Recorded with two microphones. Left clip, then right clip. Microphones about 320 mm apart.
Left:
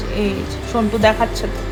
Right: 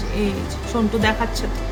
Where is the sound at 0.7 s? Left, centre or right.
Centre.